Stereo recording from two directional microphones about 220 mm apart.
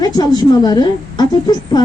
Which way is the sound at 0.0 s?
20° left (ahead or behind).